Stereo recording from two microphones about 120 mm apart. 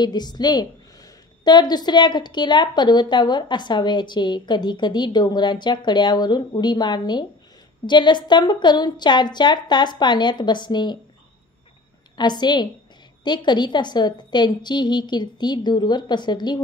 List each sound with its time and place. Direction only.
0.0 s a woman's voice: 35° left (ahead or behind)
12.2 s a woman's voice: 35° left (ahead or behind)